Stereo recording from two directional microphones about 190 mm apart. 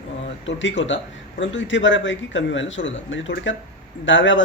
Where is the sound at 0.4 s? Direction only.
75° left (ahead or behind).